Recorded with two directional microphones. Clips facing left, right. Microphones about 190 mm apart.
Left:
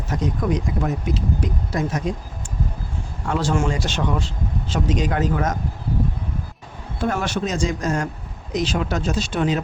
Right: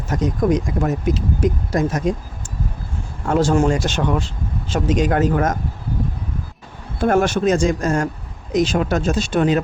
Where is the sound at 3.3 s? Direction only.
45° right (ahead or behind).